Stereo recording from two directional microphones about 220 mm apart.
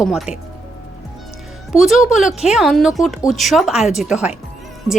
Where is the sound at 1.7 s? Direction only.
Centre (ahead or behind).